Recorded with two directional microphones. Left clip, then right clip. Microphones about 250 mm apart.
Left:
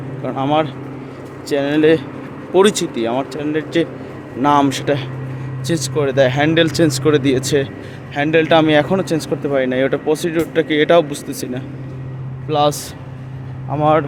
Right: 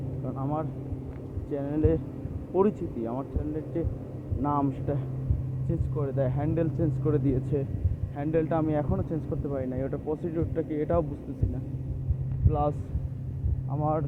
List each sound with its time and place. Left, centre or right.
0.3 s speech: left
10.2 s speech: left
12.5 s speech: left
13.7 s speech: left